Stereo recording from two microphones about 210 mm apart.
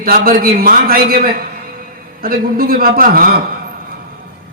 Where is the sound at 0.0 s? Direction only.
45° right (ahead or behind).